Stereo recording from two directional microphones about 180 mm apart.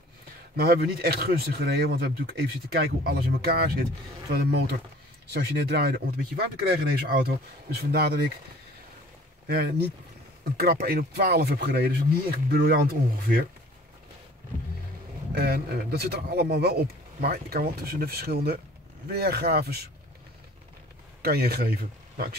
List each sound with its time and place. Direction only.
0.6 s speech: 60° right (ahead or behind)
10.4 s speech: 60° right (ahead or behind)
15.3 s speech: 60° right (ahead or behind)
21.2 s speech: 60° right (ahead or behind)